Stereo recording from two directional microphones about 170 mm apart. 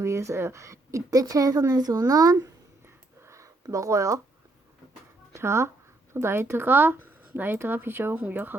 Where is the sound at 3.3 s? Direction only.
20° right (ahead or behind).